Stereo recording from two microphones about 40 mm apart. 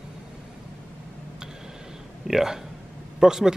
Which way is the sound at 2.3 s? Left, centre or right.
Centre.